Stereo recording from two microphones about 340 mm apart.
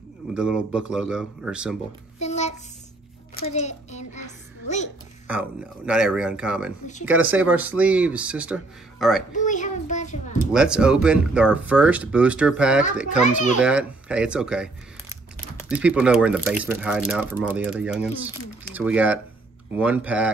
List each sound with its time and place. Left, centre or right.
0.3 s speech: centre
2.1 s a sound: centre
3.3 s a child's voice: centre
5.3 s speech: centre
9.3 s a sound: left
10.5 s speech: centre
13.2 s a child's voice: left
13.6 s speech: centre